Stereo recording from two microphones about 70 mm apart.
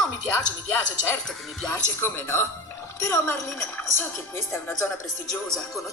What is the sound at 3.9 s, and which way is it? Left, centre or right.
Speech, left.